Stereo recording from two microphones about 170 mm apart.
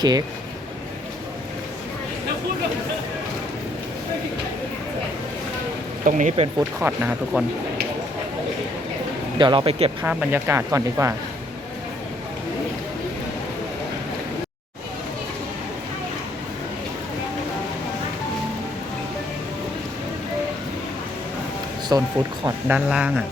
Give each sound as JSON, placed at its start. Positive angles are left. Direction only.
{"t": 0.0, "sound": "speech", "side_deg": -25}
{"t": 6.1, "sound": "speech", "side_deg": -45}
{"t": 6.6, "sound": "speech", "side_deg": -10}
{"t": 9.4, "sound": "speech", "side_deg": -30}
{"t": 10.0, "sound": "speech", "side_deg": -10}
{"t": 21.9, "sound": "speech", "side_deg": -20}
{"t": 22.9, "sound": "speech", "side_deg": -5}